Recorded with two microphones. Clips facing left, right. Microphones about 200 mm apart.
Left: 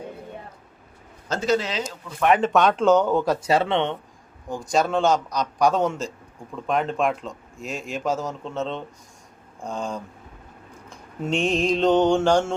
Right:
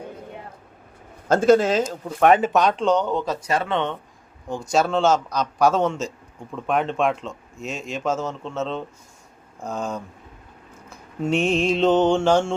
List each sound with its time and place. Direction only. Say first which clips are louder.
1.3 s speech: right 7 dB; 50° right (ahead or behind)
2.4 s a man's voice: left 1 dB; centre (ahead or behind)
3.4 s speech: left 2 dB; 25° left (ahead or behind)
4.9 s a man's voice: right 1 dB; centre (ahead or behind)
8.2 s a man's voice: right 1 dB; centre (ahead or behind)
10.8 s mantra: right 4 dB; 5° right (ahead or behind)
11.9 s a man's voice: right 1 dB; centre (ahead or behind)